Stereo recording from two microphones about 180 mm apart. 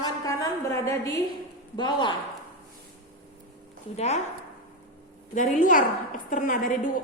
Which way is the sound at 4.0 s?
40° left (ahead or behind).